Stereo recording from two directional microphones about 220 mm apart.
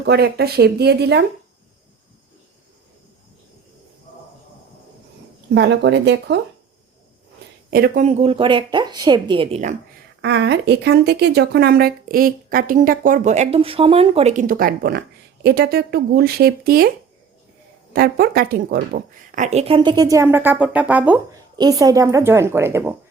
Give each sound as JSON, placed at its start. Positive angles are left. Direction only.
{"t": 0.0, "sound": "speech", "side_deg": -45}
{"t": 5.5, "sound": "speech", "side_deg": -50}
{"t": 7.7, "sound": "speech", "side_deg": -40}
{"t": 10.2, "sound": "a woman's voice", "side_deg": -50}
{"t": 17.9, "sound": "speech", "side_deg": -45}
{"t": 19.5, "sound": "speech", "side_deg": -25}
{"t": 21.5, "sound": "speech", "side_deg": -15}